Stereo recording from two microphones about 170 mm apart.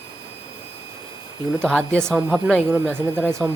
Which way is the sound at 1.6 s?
5° left (ahead or behind).